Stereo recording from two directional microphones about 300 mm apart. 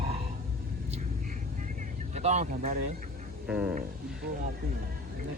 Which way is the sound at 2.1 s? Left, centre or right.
Right.